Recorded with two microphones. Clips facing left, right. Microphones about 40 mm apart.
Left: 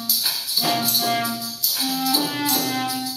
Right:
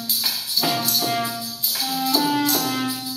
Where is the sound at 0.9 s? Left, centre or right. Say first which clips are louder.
Left 1 dB; centre.